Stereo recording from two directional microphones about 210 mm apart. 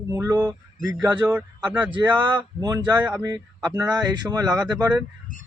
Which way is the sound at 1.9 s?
20° right (ahead or behind).